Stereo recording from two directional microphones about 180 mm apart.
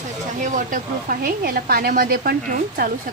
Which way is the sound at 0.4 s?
45° right (ahead or behind).